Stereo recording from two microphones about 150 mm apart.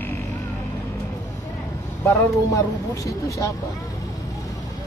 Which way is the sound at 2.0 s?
20° left (ahead or behind).